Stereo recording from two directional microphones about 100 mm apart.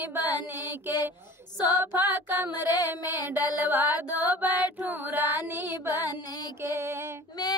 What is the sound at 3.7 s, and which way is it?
Mantra, 20° right (ahead or behind).